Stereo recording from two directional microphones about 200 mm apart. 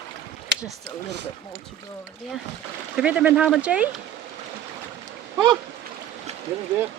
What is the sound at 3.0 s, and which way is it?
Speech, 5° right (ahead or behind).